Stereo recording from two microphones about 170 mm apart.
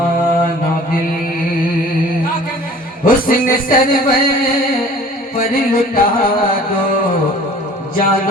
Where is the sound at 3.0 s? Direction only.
55° left (ahead or behind).